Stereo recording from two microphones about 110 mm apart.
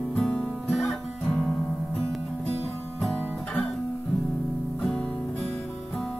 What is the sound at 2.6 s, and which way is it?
Music, 20° left (ahead or behind).